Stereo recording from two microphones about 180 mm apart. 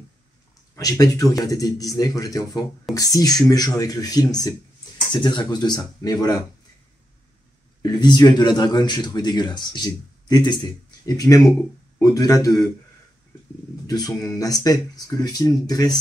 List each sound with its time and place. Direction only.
0.7 s a man's voice: 20° left (ahead or behind)
7.8 s a man's voice: 20° left (ahead or behind)
13.8 s a man's voice: 20° left (ahead or behind)